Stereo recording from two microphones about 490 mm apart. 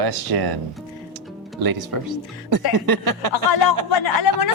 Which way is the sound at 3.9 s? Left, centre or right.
Left.